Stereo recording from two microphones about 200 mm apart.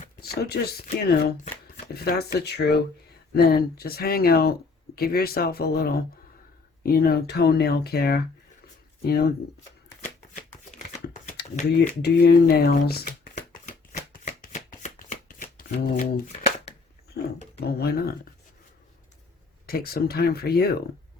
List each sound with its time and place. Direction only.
0.4 s speech: 55° left (ahead or behind)
10.7 s a sound: 45° left (ahead or behind)
12.0 s shuffling cards: 50° left (ahead or behind)
17.2 s speech: 55° left (ahead or behind)
19.6 s speech: 50° left (ahead or behind)